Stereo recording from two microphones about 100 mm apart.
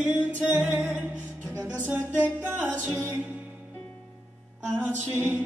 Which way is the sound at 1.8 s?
20° right (ahead or behind).